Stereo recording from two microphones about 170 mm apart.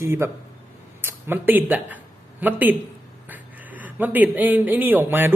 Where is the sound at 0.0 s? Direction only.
15° right (ahead or behind).